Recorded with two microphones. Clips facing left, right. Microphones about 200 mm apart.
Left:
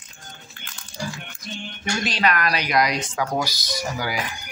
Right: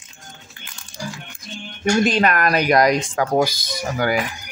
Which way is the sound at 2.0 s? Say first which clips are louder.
Right 4 dB; 50° right (ahead or behind).